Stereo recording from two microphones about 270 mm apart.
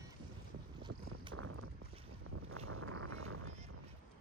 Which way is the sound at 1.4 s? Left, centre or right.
Right.